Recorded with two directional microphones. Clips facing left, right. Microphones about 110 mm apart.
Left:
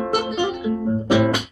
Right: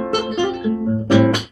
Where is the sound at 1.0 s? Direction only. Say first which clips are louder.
Right 4 dB; 10° left (ahead or behind).